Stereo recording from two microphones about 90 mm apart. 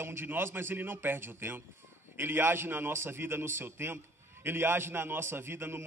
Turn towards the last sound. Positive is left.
turn(degrees=-25)  # may be behind; listen again after turning